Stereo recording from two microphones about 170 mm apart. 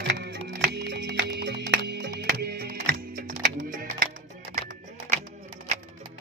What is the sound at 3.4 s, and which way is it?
Music, 60° right (ahead or behind).